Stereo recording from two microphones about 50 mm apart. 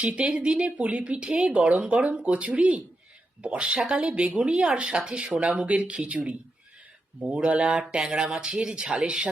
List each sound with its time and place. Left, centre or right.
0.0 s speech: right